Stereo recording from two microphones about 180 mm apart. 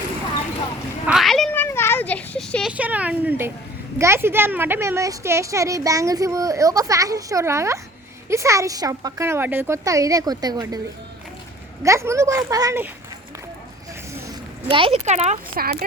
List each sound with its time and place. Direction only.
1.0 s a sound: centre (ahead or behind)
1.6 s a sound: 15° left (ahead or behind)
2.7 s a woman's voice: 10° right (ahead or behind)
11.8 s a woman's voice: 15° right (ahead or behind)
14.7 s speech: 30° right (ahead or behind)
15.6 s speech: 50° right (ahead or behind)